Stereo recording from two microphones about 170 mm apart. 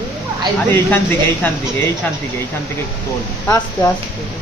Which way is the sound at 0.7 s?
10° left (ahead or behind).